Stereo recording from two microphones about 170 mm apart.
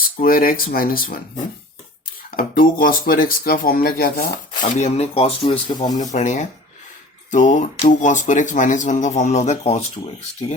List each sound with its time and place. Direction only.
0.2 s speech: 60° left (ahead or behind)
2.3 s speech: 55° left (ahead or behind)
4.8 s speech: 35° left (ahead or behind)
6.0 s a man's voice: 45° left (ahead or behind)